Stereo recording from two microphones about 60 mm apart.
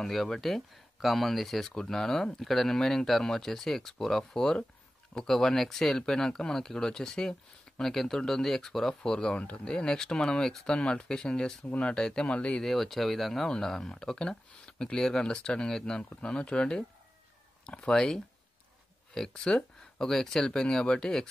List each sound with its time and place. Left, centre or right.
0.0 s speech: centre
12.6 s speech: centre